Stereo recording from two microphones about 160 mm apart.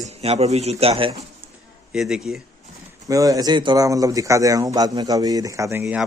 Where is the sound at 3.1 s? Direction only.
20° right (ahead or behind).